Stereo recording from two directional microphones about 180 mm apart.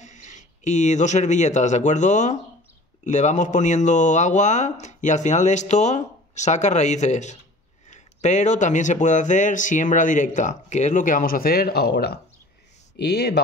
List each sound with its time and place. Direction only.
0.0 s speech: 40° left (ahead or behind); by 13.4 s 65° left (ahead or behind)